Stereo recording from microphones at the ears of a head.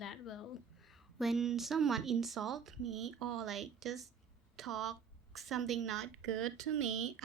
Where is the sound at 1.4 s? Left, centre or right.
Right.